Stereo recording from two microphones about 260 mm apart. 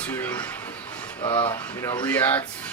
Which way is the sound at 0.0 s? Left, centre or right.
Centre.